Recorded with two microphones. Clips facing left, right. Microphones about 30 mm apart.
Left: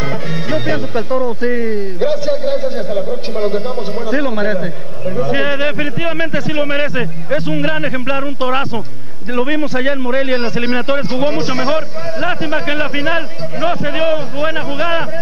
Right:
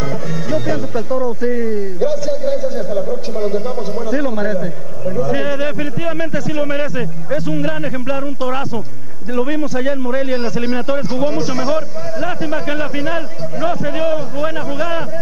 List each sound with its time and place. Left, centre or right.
0.0 s music: left
9.3 s a man's voice: left